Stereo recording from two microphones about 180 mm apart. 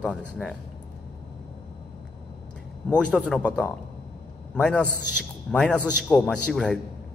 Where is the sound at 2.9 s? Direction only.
5° left (ahead or behind).